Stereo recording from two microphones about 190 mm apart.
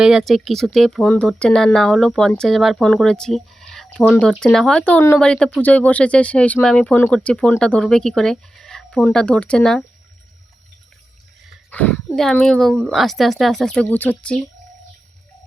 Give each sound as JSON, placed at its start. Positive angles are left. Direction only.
{"t": 0.0, "sound": "speech", "side_deg": -5}
{"t": 11.7, "sound": "speech", "side_deg": 10}